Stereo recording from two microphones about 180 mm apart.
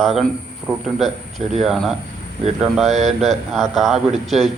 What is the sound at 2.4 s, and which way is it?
Speech, 35° right (ahead or behind).